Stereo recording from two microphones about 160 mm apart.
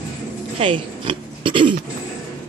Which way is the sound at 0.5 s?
35° right (ahead or behind).